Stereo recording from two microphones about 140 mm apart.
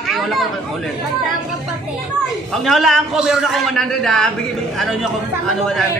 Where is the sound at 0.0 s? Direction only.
Centre (ahead or behind).